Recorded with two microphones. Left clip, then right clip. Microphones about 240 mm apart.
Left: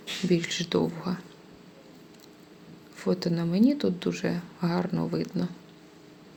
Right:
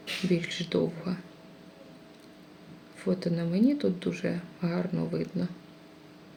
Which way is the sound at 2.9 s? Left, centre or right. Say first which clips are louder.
Left 2 dB; left.